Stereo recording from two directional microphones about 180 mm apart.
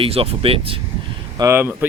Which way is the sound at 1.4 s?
15° right (ahead or behind).